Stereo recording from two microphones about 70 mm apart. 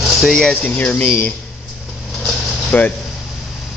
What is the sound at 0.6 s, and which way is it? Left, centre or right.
Speech, left.